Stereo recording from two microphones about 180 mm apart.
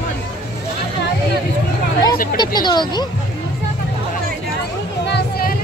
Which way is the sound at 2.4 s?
25° left (ahead or behind).